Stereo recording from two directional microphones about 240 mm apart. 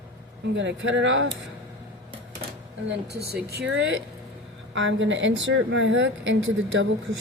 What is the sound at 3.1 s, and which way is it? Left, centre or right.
A woman's voice, right.